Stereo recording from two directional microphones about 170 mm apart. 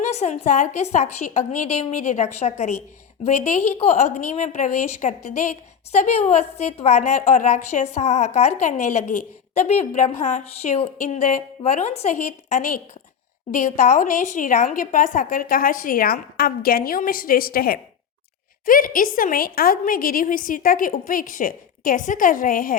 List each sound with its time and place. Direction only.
0.0 s a woman's voice: 40° left (ahead or behind)